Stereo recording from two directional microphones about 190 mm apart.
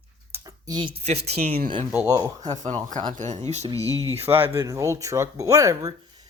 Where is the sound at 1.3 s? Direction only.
50° right (ahead or behind).